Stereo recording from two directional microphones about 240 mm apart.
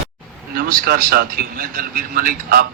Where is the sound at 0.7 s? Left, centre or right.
Right.